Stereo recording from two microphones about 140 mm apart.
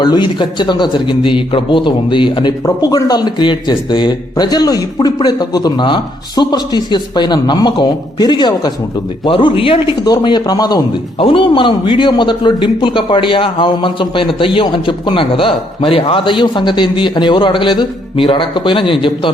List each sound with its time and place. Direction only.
0.0 s speech: 30° left (ahead or behind)
10.0 s speech: 30° left (ahead or behind)
11.2 s speech: 40° left (ahead or behind)